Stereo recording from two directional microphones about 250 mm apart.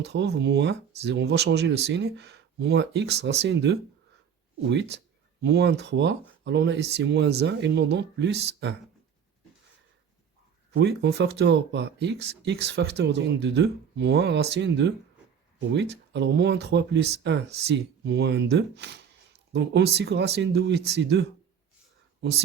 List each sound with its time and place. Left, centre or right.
0.0 s speech: right
10.8 s speech: right